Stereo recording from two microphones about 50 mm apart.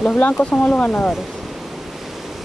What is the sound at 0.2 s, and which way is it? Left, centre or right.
Speech, left.